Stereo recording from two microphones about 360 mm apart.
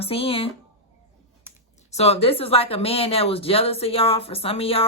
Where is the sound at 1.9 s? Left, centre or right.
Centre.